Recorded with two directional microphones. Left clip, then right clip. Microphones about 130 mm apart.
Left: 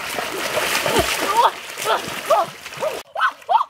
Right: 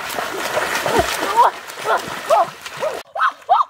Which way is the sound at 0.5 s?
10° left (ahead or behind).